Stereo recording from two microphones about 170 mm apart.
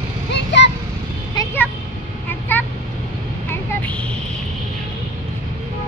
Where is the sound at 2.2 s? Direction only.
10° left (ahead or behind).